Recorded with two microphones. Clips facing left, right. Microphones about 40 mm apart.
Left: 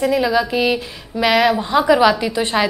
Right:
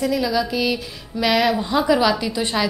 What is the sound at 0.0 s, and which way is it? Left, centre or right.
A woman's voice, left.